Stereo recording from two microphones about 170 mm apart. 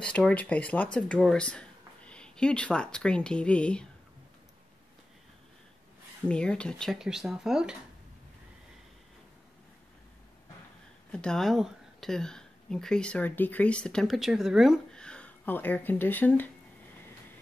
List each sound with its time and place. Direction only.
0.0 s speech: 5° left (ahead or behind)
6.2 s speech: 5° left (ahead or behind)
11.1 s speech: 5° left (ahead or behind)